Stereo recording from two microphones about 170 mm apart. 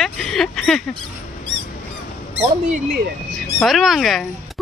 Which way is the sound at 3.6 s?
Centre (ahead or behind).